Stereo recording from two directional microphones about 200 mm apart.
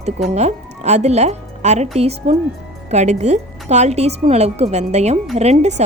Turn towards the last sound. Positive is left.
turn(degrees=-35)  # may be behind; listen again after turning